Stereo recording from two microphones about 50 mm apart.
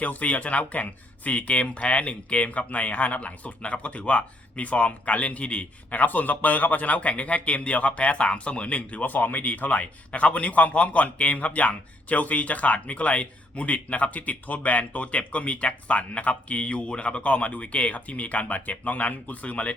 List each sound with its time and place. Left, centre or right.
0.0 s speech: left